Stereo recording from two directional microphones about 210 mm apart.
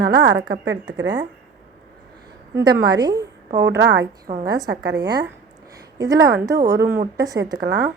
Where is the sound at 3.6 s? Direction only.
55° right (ahead or behind).